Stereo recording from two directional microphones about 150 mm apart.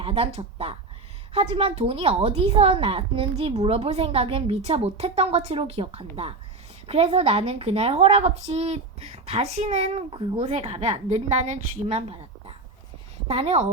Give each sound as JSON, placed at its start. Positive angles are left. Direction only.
{"t": 0.0, "sound": "a woman's voice", "side_deg": -40}